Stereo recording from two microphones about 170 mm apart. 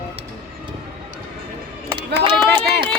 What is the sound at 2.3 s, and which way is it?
Speech, 10° left (ahead or behind).